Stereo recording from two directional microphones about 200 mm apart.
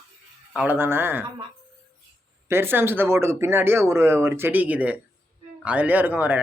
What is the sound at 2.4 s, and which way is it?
Speech, 10° right (ahead or behind).